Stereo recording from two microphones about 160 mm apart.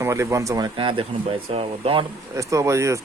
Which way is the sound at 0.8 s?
35° right (ahead or behind).